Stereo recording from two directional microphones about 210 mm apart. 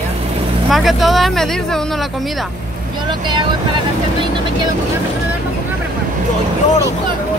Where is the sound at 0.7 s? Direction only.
Centre (ahead or behind).